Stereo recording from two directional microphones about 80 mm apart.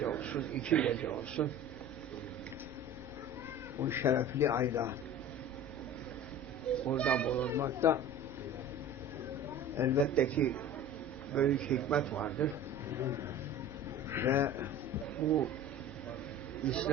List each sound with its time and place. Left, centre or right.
0.0 s a man's voice: centre
1.4 s a man's voice: left
3.8 s a man's voice: right
6.9 s a man's voice: centre
7.5 s a man's voice: right
9.7 s a man's voice: right
10.2 s a man's voice: centre
12.9 s a man's voice: right
16.6 s a man's voice: centre